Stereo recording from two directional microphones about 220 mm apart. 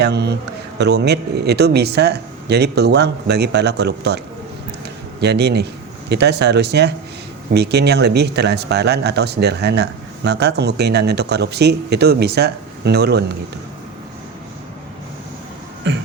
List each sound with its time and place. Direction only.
0.0 s speech: 50° right (ahead or behind)
5.2 s speech: 50° right (ahead or behind)
15.9 s speech: 50° right (ahead or behind)